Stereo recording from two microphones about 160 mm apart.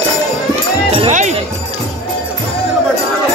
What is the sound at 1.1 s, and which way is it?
Jingle bell, 50° right (ahead or behind).